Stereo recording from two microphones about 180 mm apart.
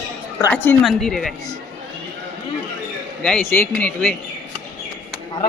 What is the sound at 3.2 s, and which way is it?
Speech, 5° left (ahead or behind).